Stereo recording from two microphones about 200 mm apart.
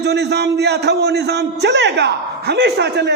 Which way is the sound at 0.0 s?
55° right (ahead or behind).